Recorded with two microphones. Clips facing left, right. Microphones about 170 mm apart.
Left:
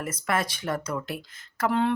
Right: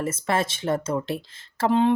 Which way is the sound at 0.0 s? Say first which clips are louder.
Right 3 dB; 25° right (ahead or behind).